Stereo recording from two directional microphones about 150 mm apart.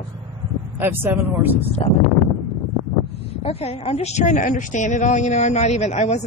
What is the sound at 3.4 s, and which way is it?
A woman's voice, 45° left (ahead or behind).